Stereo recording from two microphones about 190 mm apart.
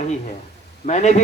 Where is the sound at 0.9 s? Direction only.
40° left (ahead or behind).